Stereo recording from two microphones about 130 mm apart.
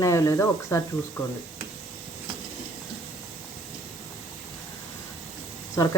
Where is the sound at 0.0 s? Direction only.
25° left (ahead or behind).